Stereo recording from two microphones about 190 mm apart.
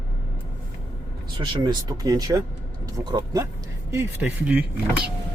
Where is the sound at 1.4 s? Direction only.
25° right (ahead or behind).